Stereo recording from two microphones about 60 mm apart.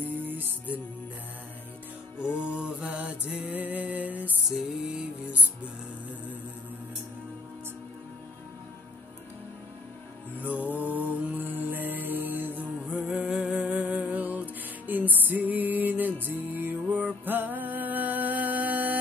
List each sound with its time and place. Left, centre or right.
0.0 s music: right
2.1 s music: left
2.4 s mantra: centre
4.5 s music: centre
10.4 s music: right
12.8 s music: centre